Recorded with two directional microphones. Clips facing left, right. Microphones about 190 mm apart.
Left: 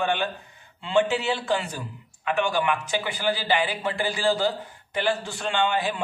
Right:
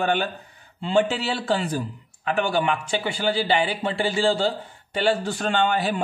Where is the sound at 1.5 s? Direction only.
35° right (ahead or behind).